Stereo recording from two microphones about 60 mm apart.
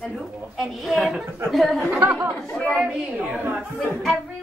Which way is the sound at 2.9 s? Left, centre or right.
Centre.